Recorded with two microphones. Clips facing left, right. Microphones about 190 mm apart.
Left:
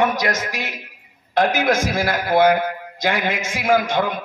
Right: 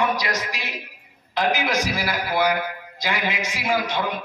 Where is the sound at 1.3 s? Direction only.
50° left (ahead or behind).